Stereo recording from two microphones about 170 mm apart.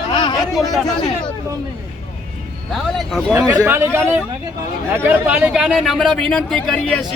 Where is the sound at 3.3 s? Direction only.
15° right (ahead or behind); by 7.0 s 5° left (ahead or behind).